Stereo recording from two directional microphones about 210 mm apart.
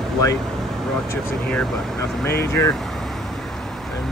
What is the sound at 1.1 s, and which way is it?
Speech, 5° left (ahead or behind).